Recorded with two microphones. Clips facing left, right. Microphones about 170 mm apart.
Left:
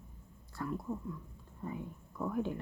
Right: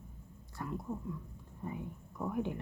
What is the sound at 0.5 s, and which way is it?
Speech, 20° right (ahead or behind).